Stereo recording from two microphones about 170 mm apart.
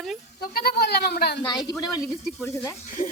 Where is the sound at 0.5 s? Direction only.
65° left (ahead or behind).